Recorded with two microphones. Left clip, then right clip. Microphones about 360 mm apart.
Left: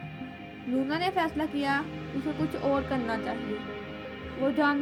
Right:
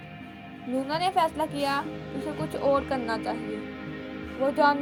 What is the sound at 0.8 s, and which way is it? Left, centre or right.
Music, centre.